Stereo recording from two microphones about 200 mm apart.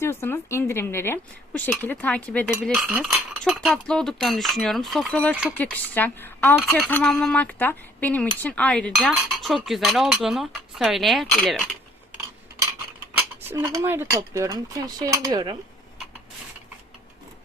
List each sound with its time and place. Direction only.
0.0 s a woman's voice: 10° left (ahead or behind); by 5.5 s 5° right (ahead or behind)
5.5 s a woman's voice: 10° left (ahead or behind)
13.1 s speech: 10° right (ahead or behind)